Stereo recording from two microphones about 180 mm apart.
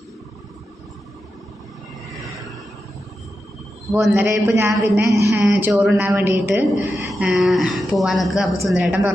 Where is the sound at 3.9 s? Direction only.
10° right (ahead or behind).